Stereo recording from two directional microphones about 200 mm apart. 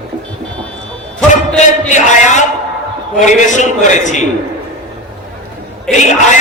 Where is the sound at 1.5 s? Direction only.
35° left (ahead or behind).